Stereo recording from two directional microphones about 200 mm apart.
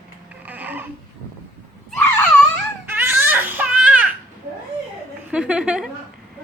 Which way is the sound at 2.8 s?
10° right (ahead or behind).